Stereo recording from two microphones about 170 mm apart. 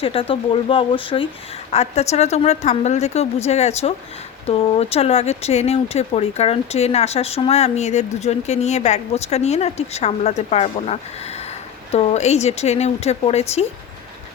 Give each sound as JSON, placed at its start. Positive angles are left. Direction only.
{"t": 0.0, "sound": "speech", "side_deg": 35}